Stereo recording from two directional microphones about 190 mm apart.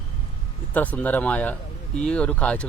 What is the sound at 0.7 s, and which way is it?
Speech, 10° left (ahead or behind).